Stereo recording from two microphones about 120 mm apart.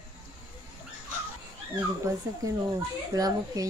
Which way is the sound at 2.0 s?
25° right (ahead or behind).